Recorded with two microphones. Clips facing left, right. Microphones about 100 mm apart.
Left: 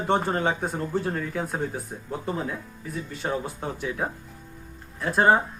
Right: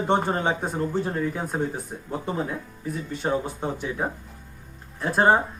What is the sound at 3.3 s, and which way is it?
Speech, 15° right (ahead or behind).